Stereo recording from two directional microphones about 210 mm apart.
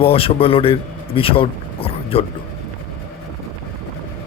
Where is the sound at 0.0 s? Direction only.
25° left (ahead or behind).